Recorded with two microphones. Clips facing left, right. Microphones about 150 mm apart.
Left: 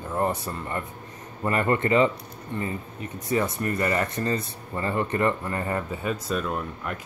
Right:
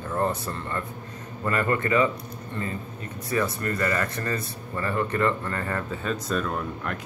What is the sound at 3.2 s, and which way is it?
Speech, 20° left (ahead or behind).